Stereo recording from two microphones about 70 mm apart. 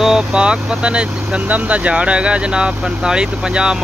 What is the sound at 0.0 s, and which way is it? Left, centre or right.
Speech, centre.